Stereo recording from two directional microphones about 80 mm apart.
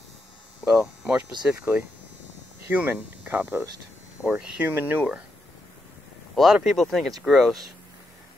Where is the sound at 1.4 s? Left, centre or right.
Centre.